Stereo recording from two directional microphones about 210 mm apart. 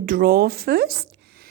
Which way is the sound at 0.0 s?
40° right (ahead or behind).